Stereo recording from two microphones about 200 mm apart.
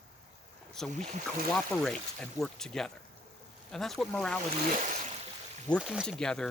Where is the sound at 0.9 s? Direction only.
35° right (ahead or behind).